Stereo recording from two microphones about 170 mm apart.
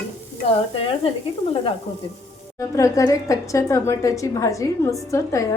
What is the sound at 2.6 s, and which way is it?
A woman's voice, 20° left (ahead or behind).